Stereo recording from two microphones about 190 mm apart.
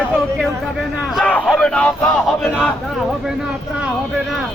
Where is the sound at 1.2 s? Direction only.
5° left (ahead or behind).